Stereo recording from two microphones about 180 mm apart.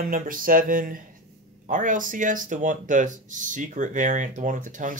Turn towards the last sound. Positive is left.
turn(degrees=-45)  # may be behind; listen again after turning